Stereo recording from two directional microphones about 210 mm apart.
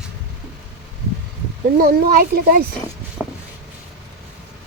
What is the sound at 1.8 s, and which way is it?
Speech, 45° right (ahead or behind).